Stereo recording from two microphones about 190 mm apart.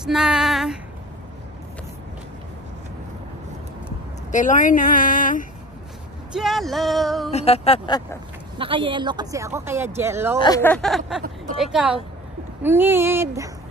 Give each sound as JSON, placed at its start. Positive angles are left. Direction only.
{"t": 0.0, "sound": "female singing", "side_deg": -5}
{"t": 4.3, "sound": "speech", "side_deg": 40}
{"t": 6.3, "sound": "music", "side_deg": 0}
{"t": 7.3, "sound": "speech", "side_deg": 35}
{"t": 8.5, "sound": "speech", "side_deg": -25}
{"t": 10.6, "sound": "music", "side_deg": 5}
{"t": 12.6, "sound": "speech", "side_deg": -10}